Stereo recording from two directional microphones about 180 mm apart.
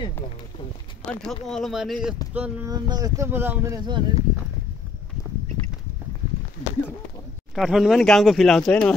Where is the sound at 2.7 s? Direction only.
20° right (ahead or behind).